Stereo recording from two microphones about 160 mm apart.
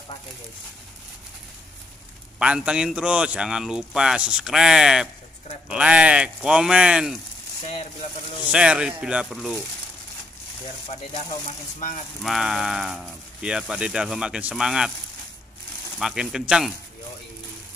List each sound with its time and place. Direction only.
2.3 s speech: 5° right (ahead or behind)
8.0 s speech: 45° left (ahead or behind)
8.5 s speech: 5° right (ahead or behind)
12.2 s speech: centre (ahead or behind)
16.0 s speech: 5° right (ahead or behind)